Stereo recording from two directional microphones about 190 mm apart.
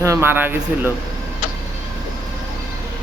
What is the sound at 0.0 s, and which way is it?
Speech, 15° right (ahead or behind).